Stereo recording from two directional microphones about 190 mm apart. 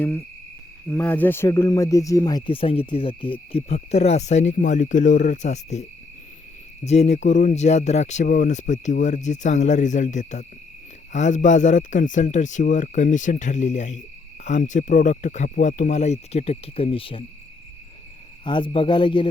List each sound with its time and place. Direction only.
0.9 s speech: 10° left (ahead or behind); by 5.8 s 35° left (ahead or behind)
6.8 s speech: 35° left (ahead or behind)
18.4 s speech: 25° left (ahead or behind)